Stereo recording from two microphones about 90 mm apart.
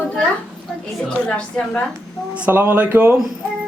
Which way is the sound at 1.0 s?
10° left (ahead or behind).